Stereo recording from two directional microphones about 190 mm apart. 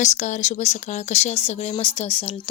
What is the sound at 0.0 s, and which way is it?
Speech, 40° left (ahead or behind).